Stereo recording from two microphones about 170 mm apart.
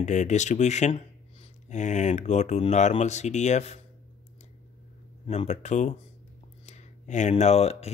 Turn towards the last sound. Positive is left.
turn(degrees=40)  # may be behind; listen again after turning